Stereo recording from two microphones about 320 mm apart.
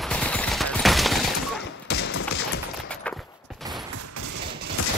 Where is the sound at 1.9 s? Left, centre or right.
Left.